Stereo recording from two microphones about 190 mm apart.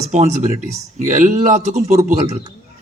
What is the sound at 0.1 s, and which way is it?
A man's voice, 40° right (ahead or behind).